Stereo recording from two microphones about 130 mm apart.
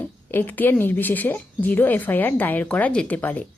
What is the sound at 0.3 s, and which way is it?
A woman's voice, 15° left (ahead or behind).